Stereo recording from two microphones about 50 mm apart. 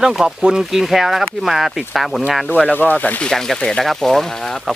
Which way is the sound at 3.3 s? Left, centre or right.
Centre.